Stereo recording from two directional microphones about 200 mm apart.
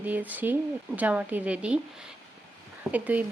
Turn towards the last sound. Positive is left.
turn(degrees=-10)  # may be behind; listen again after turning